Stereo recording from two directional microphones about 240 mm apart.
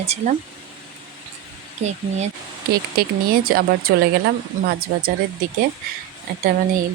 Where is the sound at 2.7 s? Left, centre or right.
Right.